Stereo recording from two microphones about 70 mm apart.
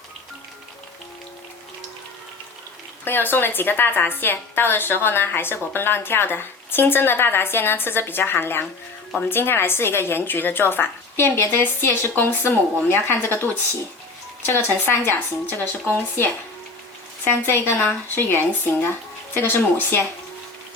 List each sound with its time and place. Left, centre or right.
3.0 s a woman's voice: left